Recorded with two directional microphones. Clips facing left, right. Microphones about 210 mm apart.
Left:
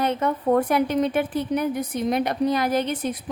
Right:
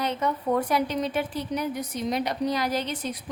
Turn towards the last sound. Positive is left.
turn(degrees=55)  # may be behind; listen again after turning